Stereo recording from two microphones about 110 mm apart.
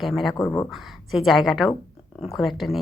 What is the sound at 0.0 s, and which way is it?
Speech, centre (ahead or behind).